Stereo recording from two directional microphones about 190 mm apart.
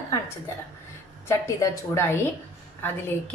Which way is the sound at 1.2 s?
15° left (ahead or behind).